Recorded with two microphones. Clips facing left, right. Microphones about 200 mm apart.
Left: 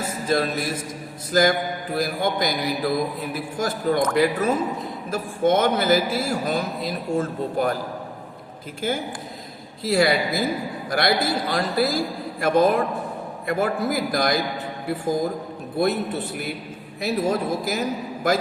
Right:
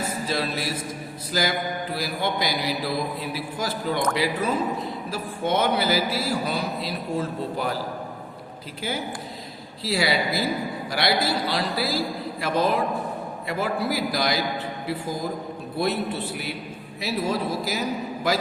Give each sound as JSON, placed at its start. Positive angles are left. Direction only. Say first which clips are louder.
{"t": 0.3, "sound": "a man's voice", "louder": "left 7 dB", "side_deg": 50}
{"t": 8.8, "sound": "a man's voice", "louder": "left 4 dB", "side_deg": 50}
{"t": 15.8, "sound": "a man's voice", "louder": "left 3 dB", "side_deg": 50}